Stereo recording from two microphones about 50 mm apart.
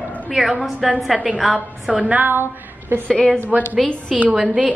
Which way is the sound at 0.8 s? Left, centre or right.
Centre.